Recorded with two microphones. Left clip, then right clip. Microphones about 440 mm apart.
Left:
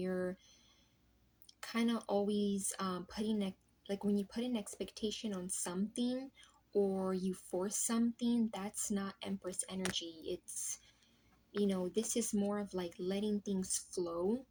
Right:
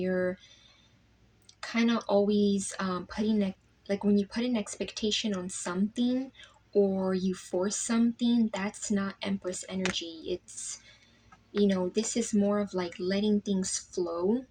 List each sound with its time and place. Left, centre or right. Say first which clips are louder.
0.0 s a sound: right 9 dB; left
1.6 s speech: right 9 dB; left
11.5 s speech: right 8 dB; left